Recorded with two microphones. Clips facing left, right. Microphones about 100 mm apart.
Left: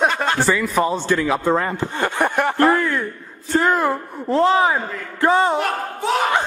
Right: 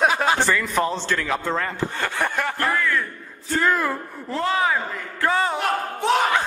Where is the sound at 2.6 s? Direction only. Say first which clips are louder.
Left 7 dB; 30° left (ahead or behind).